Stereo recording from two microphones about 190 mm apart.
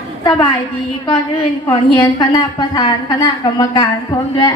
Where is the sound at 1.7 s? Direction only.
25° left (ahead or behind).